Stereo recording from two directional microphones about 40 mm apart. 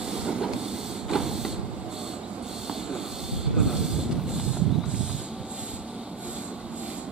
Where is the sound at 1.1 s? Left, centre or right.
Centre.